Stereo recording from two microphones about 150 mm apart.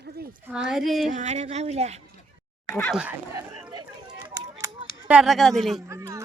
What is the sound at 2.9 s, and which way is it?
Speech, 5° right (ahead or behind).